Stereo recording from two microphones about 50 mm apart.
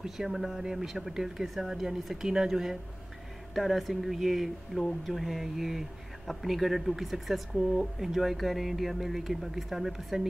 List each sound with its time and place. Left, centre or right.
0.0 s speech: centre